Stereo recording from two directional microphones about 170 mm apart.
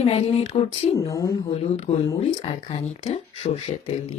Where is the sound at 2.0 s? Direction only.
30° left (ahead or behind).